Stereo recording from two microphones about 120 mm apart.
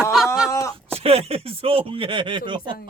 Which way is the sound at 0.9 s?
55° right (ahead or behind).